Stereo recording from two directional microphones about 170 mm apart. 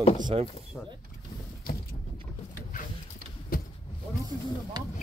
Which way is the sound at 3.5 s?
60° left (ahead or behind).